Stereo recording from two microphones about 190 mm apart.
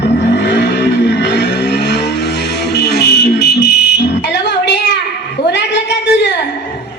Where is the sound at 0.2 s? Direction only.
65° left (ahead or behind).